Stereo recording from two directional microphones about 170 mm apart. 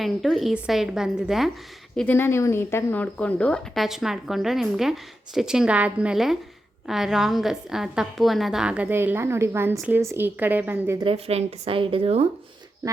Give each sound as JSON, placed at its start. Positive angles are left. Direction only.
{"t": 0.0, "sound": "speech", "side_deg": 0}
{"t": 2.0, "sound": "a woman's voice", "side_deg": 10}
{"t": 11.0, "sound": "speech", "side_deg": -35}